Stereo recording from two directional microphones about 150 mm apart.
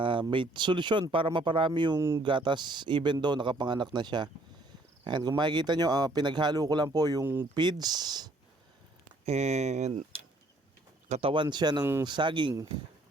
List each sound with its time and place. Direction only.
0.0 s speech: 35° right (ahead or behind)
2.0 s speech: 15° right (ahead or behind)
2.2 s speech: 30° right (ahead or behind)
9.2 s speech: 45° right (ahead or behind)
11.1 s speech: 40° right (ahead or behind)